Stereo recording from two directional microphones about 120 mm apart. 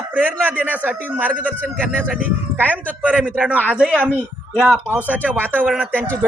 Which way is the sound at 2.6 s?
15° right (ahead or behind).